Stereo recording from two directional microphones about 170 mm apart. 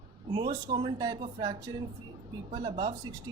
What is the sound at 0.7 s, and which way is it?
Speech, 25° right (ahead or behind).